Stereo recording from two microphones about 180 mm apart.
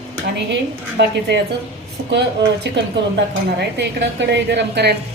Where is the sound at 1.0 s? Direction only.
75° right (ahead or behind).